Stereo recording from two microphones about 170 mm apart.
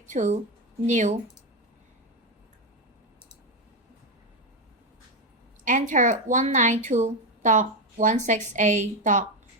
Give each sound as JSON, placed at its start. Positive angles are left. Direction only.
{"t": 0.1, "sound": "speech", "side_deg": -45}
{"t": 5.6, "sound": "speech", "side_deg": -45}